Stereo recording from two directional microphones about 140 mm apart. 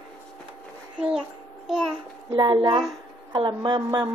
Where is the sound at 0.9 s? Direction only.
5° right (ahead or behind).